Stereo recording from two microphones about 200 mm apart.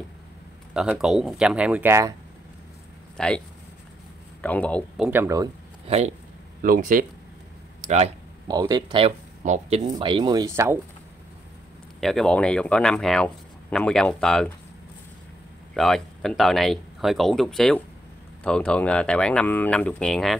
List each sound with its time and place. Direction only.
0.7 s speech: centre (ahead or behind)
3.2 s a man's voice: 5° left (ahead or behind)
5.0 s speech: 10° right (ahead or behind)
5.9 s speech: 35° right (ahead or behind)
6.6 s speech: 45° right (ahead or behind)
8.5 s speech: 20° right (ahead or behind)
9.4 s speech: 35° right (ahead or behind)
9.8 s speech: 25° right (ahead or behind)
12.0 s speech: centre (ahead or behind)
15.7 s speech: centre (ahead or behind)